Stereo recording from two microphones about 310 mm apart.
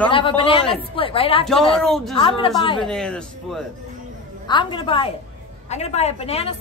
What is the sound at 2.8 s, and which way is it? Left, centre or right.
Speech, centre.